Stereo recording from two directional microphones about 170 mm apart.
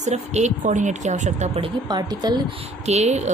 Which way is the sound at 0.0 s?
40° right (ahead or behind).